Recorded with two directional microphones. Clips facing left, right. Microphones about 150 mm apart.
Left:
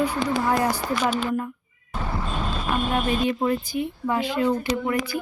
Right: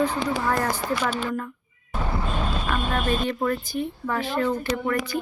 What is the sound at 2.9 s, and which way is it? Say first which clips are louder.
Speech: left 2 dB; 15° left (ahead or behind).